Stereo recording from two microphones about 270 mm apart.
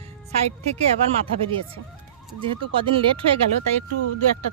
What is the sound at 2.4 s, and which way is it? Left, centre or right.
Speech, centre.